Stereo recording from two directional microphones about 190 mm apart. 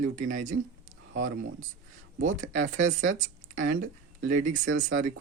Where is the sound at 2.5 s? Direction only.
40° right (ahead or behind).